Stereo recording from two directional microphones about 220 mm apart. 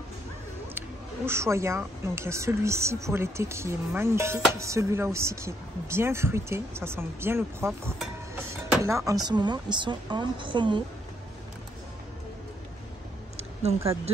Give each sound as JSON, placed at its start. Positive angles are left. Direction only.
{"t": 0.7, "sound": "a woman's voice", "side_deg": -10}
{"t": 13.4, "sound": "speech", "side_deg": -30}